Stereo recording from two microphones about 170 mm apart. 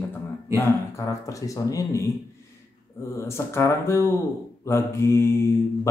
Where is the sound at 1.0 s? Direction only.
20° left (ahead or behind).